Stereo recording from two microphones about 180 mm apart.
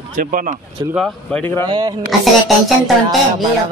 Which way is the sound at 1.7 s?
20° right (ahead or behind).